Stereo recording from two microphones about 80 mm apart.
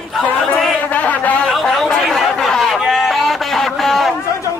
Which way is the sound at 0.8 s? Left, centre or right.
Centre.